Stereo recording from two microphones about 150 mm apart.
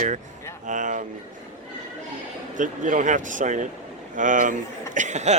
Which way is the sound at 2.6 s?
60° right (ahead or behind).